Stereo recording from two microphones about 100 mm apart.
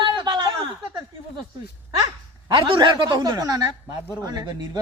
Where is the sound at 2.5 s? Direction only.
55° right (ahead or behind).